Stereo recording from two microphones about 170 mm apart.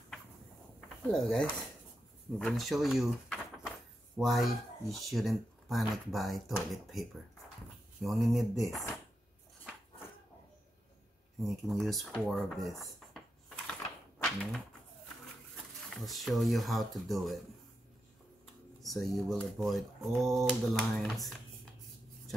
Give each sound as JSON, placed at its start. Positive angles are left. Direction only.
{"t": 0.7, "sound": "a sound", "side_deg": 5}
{"t": 2.3, "sound": "speech", "side_deg": 0}
{"t": 11.4, "sound": "speech", "side_deg": 0}
{"t": 13.7, "sound": "typewriter", "side_deg": 5}
{"t": 15.5, "sound": "speech", "side_deg": 0}
{"t": 18.8, "sound": "speech", "side_deg": 0}